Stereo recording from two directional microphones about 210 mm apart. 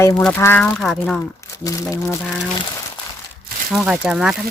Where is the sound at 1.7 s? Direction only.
15° left (ahead or behind).